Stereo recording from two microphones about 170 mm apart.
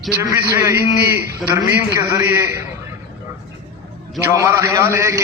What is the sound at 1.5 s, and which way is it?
Speech, 20° right (ahead or behind).